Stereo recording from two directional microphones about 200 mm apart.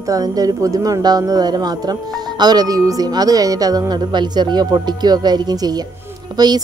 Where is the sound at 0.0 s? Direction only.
15° right (ahead or behind).